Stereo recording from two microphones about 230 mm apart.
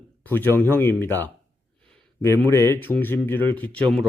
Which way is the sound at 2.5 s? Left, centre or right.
Centre.